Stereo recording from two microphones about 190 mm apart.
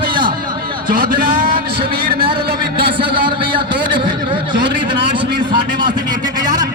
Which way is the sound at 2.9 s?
25° right (ahead or behind).